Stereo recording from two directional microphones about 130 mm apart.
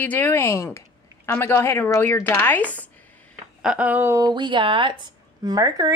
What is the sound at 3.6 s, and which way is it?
A woman's voice, 10° right (ahead or behind).